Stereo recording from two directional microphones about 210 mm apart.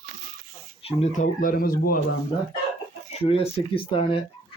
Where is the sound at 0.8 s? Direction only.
35° left (ahead or behind).